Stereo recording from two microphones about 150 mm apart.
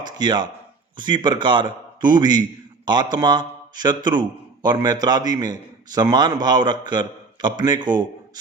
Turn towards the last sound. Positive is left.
turn(degrees=-30)  # may be behind; listen again after turning